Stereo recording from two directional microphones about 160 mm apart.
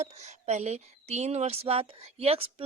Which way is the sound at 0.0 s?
45° right (ahead or behind).